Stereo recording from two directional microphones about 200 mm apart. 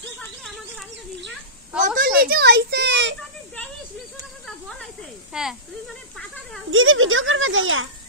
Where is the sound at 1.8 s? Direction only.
50° right (ahead or behind).